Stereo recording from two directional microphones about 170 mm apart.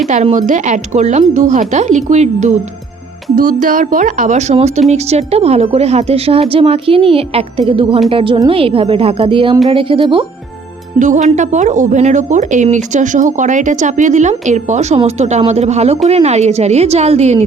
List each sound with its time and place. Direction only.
0.1 s a woman's voice: 45° right (ahead or behind)
11.0 s a woman's voice: 45° right (ahead or behind)